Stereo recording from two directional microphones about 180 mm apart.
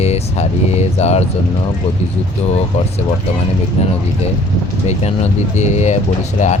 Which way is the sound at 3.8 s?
35° left (ahead or behind).